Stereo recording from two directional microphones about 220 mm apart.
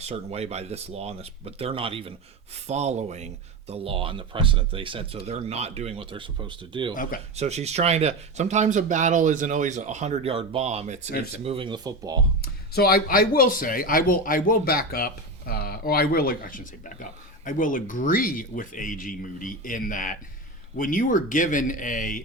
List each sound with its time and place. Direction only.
0.0 s speech: 30° right (ahead or behind)
6.9 s speech: 40° left (ahead or behind)
7.3 s speech: 30° right (ahead or behind)
12.4 s speech: 45° left (ahead or behind)